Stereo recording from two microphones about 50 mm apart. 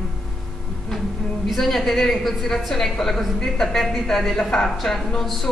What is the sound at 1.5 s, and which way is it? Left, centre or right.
A woman's voice, centre.